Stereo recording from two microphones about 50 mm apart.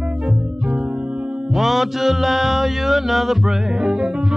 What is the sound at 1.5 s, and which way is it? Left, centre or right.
Music, centre.